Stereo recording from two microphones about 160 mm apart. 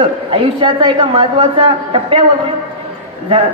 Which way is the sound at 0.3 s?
35° right (ahead or behind).